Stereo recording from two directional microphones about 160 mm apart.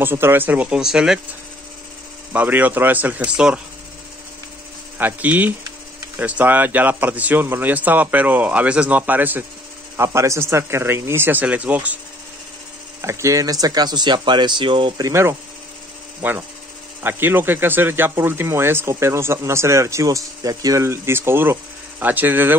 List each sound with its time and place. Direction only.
0.0 s speech: 15° right (ahead or behind)
2.3 s speech: 10° right (ahead or behind)
4.9 s speech: 10° right (ahead or behind)
13.0 s speech: 20° right (ahead or behind)
15.0 s speech: 15° right (ahead or behind)